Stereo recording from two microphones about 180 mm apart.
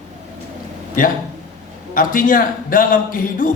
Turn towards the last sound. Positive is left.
turn(degrees=50)  # may be behind; listen again after turning